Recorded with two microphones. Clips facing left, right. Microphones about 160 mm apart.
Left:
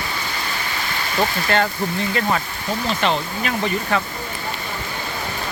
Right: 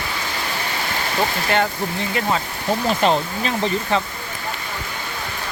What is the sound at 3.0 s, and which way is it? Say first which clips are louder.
Speech: right 3 dB; 40° right (ahead or behind).